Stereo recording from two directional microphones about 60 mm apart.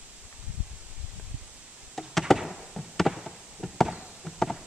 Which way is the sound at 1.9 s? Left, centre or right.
Centre.